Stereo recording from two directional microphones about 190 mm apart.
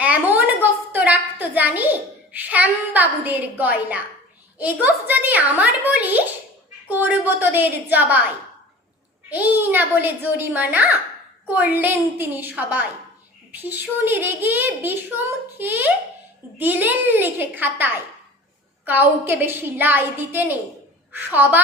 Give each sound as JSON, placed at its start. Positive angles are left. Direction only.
{"t": 0.0, "sound": "a sound", "side_deg": -10}
{"t": 4.5, "sound": "a woman's voice", "side_deg": -10}
{"t": 9.3, "sound": "a woman's voice", "side_deg": -10}